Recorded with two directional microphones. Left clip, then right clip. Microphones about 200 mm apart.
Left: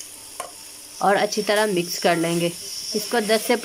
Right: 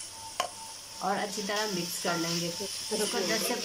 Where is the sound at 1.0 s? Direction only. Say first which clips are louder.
Left 12 dB; 50° left (ahead or behind).